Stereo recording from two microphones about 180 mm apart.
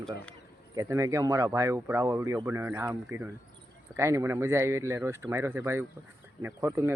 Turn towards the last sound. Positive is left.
turn(degrees=-15)  # may be behind; listen again after turning